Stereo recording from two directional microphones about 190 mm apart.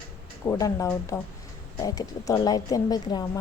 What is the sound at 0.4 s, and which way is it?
A woman's voice, 15° left (ahead or behind).